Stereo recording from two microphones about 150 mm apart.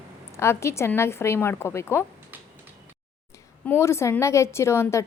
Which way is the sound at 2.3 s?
10° right (ahead or behind).